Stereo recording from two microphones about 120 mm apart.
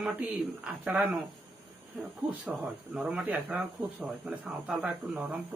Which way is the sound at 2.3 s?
10° right (ahead or behind).